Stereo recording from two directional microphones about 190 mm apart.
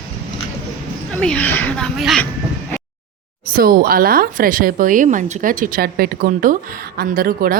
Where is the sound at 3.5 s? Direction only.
50° right (ahead or behind).